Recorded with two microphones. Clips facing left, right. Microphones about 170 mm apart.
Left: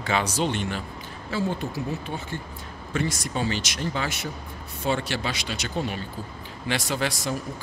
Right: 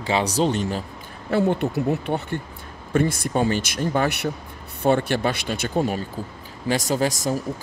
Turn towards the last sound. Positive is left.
turn(degrees=-45)  # may be behind; listen again after turning